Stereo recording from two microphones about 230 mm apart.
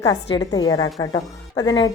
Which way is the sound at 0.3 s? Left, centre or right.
Centre.